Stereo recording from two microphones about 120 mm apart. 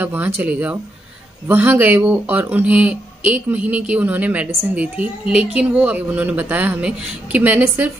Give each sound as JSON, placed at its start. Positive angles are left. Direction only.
{"t": 0.0, "sound": "speech", "side_deg": -15}